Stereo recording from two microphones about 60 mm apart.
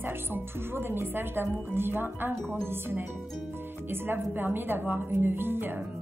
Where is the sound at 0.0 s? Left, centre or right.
Right.